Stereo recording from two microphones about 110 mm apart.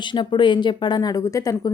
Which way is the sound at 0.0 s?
45° left (ahead or behind).